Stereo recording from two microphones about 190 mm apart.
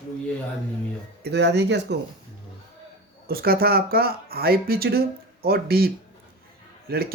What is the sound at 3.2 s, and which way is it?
Speech, 55° right (ahead or behind).